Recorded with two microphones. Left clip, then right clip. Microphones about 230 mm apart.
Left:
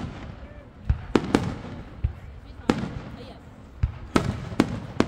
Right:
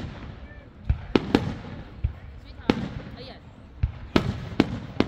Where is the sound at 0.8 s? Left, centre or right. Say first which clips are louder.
Even; centre.